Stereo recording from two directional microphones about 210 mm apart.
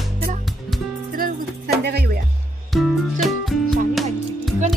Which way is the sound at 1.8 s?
50° right (ahead or behind).